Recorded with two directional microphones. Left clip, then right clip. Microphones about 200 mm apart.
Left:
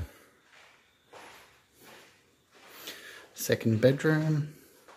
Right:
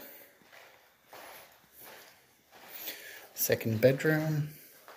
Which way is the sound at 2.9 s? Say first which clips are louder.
Left 1 dB; 35° left (ahead or behind).